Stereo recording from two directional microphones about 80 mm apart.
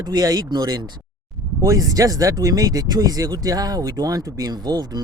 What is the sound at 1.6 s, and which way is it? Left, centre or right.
Speech, right.